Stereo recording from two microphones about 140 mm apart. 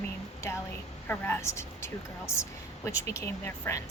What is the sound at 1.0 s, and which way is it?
A woman's voice, 15° left (ahead or behind).